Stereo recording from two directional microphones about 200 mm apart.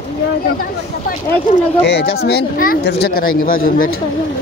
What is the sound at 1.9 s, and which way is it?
Speech, 55° left (ahead or behind).